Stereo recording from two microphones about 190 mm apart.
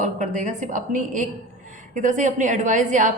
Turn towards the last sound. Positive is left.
turn(degrees=-40)  # may be behind; listen again after turning